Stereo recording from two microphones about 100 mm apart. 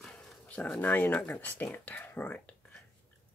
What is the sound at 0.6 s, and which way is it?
Speech, 15° left (ahead or behind).